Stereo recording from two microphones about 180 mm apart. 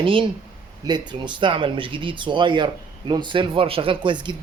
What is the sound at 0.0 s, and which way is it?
Speech, 30° right (ahead or behind).